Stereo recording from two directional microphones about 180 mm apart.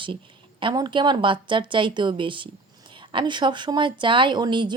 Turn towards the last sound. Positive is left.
turn(degrees=-25)  # may be behind; listen again after turning